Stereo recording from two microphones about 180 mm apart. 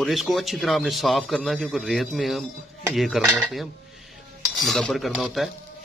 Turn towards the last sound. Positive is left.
turn(degrees=0)  # may be behind; listen again after turning